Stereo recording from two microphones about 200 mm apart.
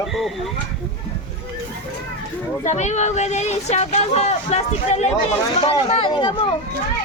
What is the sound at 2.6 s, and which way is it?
Speech, 35° left (ahead or behind).